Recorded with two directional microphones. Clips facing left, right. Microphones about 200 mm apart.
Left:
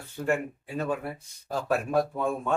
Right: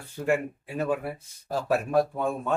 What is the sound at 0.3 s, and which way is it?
Speech, 10° right (ahead or behind).